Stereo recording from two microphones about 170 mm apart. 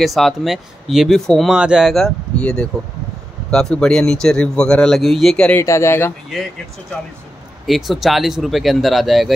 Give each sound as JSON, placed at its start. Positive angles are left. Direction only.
{"t": 0.0, "sound": "speech", "side_deg": 0}
{"t": 5.6, "sound": "speech", "side_deg": 15}
{"t": 7.6, "sound": "speech", "side_deg": 0}